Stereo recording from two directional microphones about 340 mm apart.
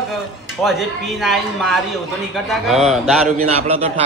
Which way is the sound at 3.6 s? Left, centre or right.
Centre.